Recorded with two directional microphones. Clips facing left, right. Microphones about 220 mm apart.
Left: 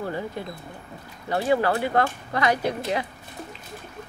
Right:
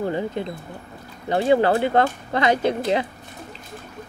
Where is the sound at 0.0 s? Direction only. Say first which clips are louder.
Right 5 dB; 20° right (ahead or behind).